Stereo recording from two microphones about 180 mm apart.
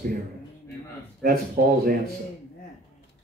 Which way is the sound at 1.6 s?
60° right (ahead or behind).